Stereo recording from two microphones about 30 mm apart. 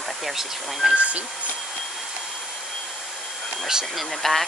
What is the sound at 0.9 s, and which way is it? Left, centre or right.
Speech, right.